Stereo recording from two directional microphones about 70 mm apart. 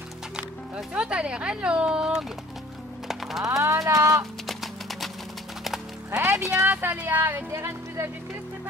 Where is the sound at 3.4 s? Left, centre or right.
Right.